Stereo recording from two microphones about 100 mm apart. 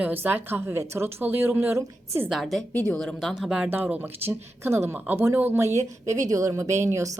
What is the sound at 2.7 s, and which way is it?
Speech, 10° left (ahead or behind).